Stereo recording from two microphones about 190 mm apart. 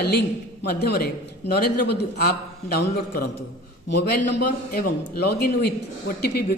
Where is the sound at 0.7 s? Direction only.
55° left (ahead or behind).